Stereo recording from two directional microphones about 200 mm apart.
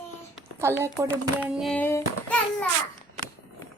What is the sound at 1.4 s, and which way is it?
A child's voice, centre (ahead or behind).